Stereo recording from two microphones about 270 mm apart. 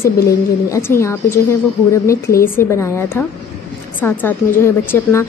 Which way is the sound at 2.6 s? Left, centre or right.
Centre.